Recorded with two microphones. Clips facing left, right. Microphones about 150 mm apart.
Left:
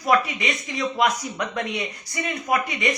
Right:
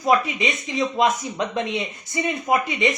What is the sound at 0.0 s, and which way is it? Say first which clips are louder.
Speech: right 2 dB; 20° right (ahead or behind).